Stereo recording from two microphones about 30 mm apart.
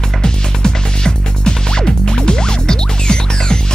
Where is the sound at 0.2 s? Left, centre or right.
Left.